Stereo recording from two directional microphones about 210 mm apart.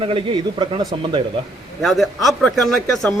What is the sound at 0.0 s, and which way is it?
Speech, 25° right (ahead or behind).